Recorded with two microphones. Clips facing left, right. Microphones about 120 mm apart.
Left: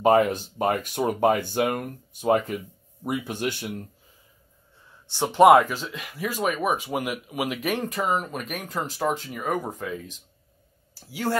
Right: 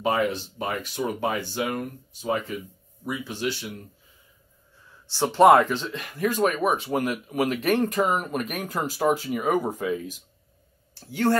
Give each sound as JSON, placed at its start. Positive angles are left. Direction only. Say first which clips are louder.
{"t": 0.0, "sound": "speech", "louder": "left 5 dB", "side_deg": 45}
{"t": 5.1, "sound": "speech", "louder": "left 1 dB", "side_deg": 15}
{"t": 11.0, "sound": "speech", "louder": "right 5 dB", "side_deg": 5}